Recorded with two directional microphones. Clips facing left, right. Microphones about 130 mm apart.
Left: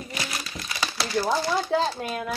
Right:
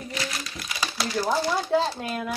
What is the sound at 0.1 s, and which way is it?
Crumpling, 10° left (ahead or behind).